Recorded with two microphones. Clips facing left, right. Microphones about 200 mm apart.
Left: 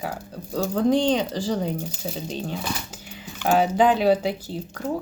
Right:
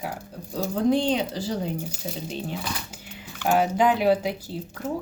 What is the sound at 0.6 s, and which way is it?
Speech, 5° right (ahead or behind).